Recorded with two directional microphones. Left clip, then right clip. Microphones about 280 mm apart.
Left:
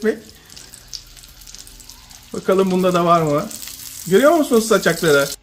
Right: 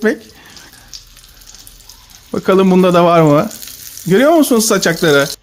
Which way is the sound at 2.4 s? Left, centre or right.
Right.